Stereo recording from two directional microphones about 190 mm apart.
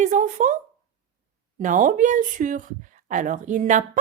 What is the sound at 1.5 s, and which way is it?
Speech, 40° right (ahead or behind).